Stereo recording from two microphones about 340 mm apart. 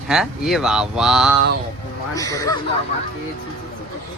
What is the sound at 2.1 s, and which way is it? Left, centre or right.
Speech, centre.